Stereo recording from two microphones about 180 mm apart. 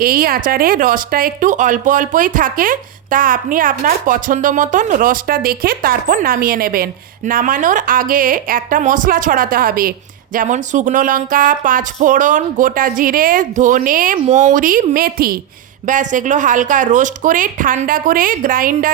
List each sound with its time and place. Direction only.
0.0 s speech: 55° right (ahead or behind)